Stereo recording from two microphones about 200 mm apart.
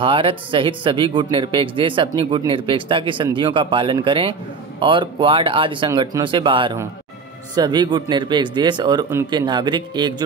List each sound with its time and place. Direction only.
0.0 s speech: 25° right (ahead or behind)